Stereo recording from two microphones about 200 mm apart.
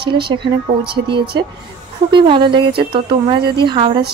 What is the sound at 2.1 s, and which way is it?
A woman's voice, 25° right (ahead or behind).